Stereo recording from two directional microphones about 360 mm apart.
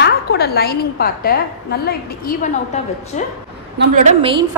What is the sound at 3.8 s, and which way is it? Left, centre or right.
Speech, centre.